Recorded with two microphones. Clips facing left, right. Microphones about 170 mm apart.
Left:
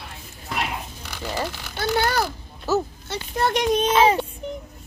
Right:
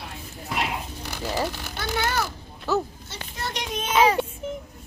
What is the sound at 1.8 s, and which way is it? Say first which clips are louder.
Speech: left 5 dB; 35° left (ahead or behind).